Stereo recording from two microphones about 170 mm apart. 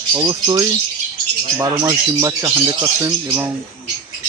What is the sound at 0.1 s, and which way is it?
Speech, 25° right (ahead or behind).